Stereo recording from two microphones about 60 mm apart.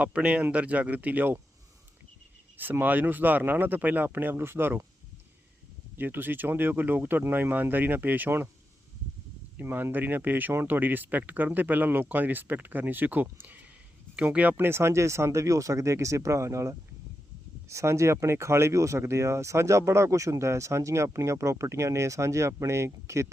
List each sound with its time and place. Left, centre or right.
0.0 s speech: right
2.6 s speech: right
6.0 s speech: right
9.6 s speech: right
14.6 s speech: right